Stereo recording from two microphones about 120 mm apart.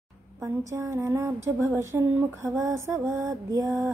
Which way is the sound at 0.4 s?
25° right (ahead or behind).